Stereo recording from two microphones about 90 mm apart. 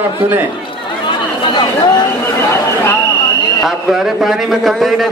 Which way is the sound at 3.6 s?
5° right (ahead or behind).